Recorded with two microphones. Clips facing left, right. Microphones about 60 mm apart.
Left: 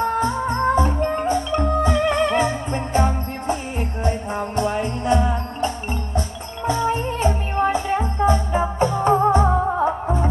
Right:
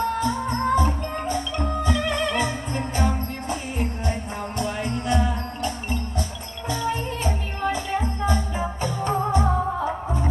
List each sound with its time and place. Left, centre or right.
0.0 s music: left
6.7 s music: left